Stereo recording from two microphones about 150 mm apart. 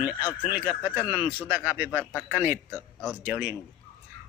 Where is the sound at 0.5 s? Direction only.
10° right (ahead or behind).